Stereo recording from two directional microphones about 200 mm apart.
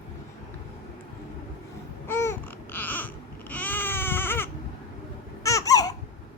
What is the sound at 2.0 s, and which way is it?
Babbling, 10° left (ahead or behind).